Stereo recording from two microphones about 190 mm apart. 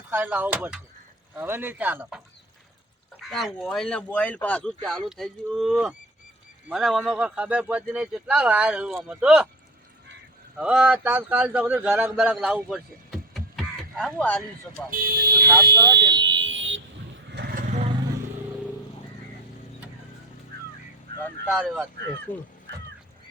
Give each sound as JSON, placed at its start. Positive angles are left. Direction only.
{"t": 0.1, "sound": "a man's voice", "side_deg": -10}
{"t": 10.6, "sound": "a man's voice", "side_deg": -5}
{"t": 14.8, "sound": "speech", "side_deg": -50}
{"t": 15.4, "sound": "a man's voice", "side_deg": -15}
{"t": 16.0, "sound": "vehicle", "side_deg": -65}
{"t": 17.3, "sound": "vehicle", "side_deg": -55}
{"t": 21.4, "sound": "a man's voice", "side_deg": -5}
{"t": 22.3, "sound": "speech", "side_deg": 10}